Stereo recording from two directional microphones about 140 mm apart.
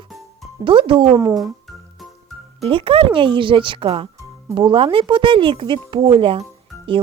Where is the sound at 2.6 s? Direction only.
40° right (ahead or behind).